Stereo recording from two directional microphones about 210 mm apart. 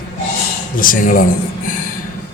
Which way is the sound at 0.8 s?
40° left (ahead or behind).